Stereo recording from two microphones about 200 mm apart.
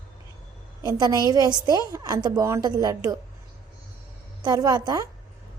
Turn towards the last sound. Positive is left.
turn(degrees=-20)  # may be behind; listen again after turning